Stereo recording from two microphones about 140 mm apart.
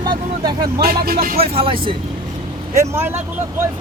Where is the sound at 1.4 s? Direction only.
40° right (ahead or behind).